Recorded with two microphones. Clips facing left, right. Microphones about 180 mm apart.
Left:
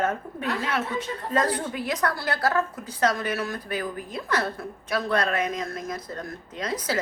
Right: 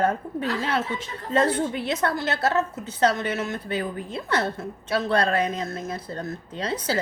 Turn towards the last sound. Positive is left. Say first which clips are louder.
# right 2 dB
turn(degrees=-30)  # may be behind; listen again after turning